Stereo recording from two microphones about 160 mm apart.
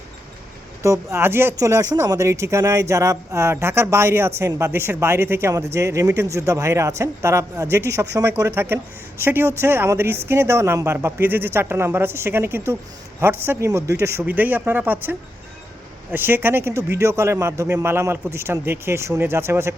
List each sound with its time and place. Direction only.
0.8 s speech: 15° right (ahead or behind)
16.1 s speech: 15° right (ahead or behind)